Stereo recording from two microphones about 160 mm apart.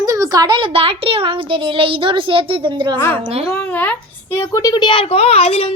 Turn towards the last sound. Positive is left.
turn(degrees=40)  # may be behind; listen again after turning